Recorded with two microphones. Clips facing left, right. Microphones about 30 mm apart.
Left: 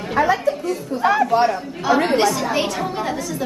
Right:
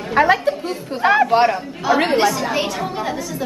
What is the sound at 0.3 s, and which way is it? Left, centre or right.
Speech, right.